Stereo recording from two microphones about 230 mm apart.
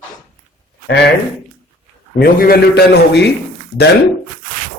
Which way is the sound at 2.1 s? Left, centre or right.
Left.